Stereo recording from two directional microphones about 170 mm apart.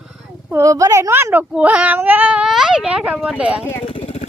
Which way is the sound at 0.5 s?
20° right (ahead or behind).